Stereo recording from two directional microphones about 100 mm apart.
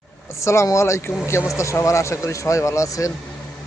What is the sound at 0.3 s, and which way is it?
Speech, 30° left (ahead or behind).